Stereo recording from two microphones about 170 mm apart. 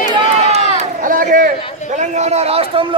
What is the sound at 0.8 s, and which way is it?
A man's voice, 50° right (ahead or behind).